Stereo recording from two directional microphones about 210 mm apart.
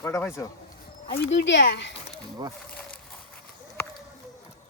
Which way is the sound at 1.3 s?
60° left (ahead or behind).